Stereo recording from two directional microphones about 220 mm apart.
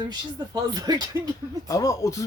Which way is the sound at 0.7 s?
15° right (ahead or behind).